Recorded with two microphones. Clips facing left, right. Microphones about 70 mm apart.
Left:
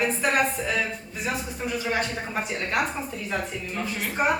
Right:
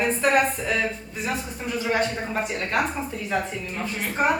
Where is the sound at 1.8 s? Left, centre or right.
Centre.